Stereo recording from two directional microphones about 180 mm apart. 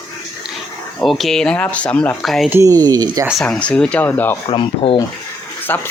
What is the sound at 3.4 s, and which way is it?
Speech, 5° left (ahead or behind).